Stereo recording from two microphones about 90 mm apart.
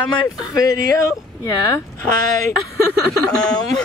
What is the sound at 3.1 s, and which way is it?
Speech, 10° left (ahead or behind).